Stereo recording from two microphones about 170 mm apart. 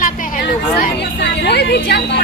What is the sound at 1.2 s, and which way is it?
A woman's voice, 80° left.